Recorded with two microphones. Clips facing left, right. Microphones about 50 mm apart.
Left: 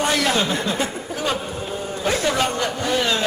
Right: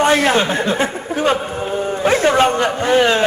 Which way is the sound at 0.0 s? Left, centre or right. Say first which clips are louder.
Right 6 dB; right.